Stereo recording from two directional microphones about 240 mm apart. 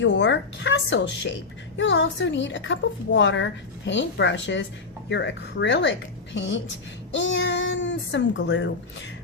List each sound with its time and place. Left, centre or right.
0.0 s a woman's voice: left